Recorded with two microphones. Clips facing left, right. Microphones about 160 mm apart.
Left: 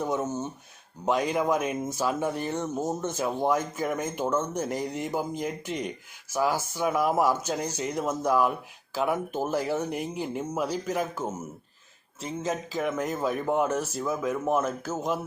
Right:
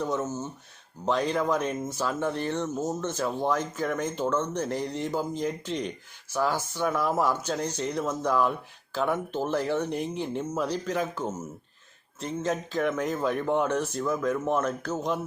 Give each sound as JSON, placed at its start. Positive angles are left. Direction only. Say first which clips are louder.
{"t": 0.0, "sound": "speech", "louder": "left 1 dB", "side_deg": 15}